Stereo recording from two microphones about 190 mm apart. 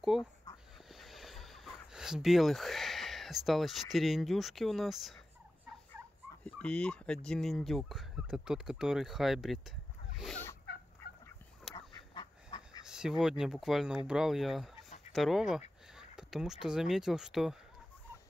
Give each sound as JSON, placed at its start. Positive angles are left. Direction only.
{"t": 0.1, "sound": "speech", "side_deg": -5}
{"t": 6.4, "sound": "speech", "side_deg": 5}
{"t": 11.7, "sound": "duck", "side_deg": 25}
{"t": 12.8, "sound": "speech", "side_deg": -5}
{"t": 16.0, "sound": "a sound", "side_deg": -5}
{"t": 16.6, "sound": "speech", "side_deg": -5}